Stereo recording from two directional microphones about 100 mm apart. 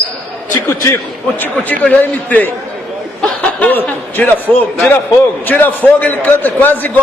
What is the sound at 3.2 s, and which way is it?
Chuckle, 15° left (ahead or behind).